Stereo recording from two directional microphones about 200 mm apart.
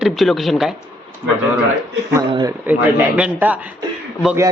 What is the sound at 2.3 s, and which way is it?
Speech, 20° right (ahead or behind).